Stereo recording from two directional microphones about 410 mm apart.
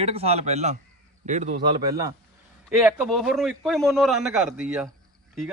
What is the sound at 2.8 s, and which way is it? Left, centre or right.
A man's voice, centre.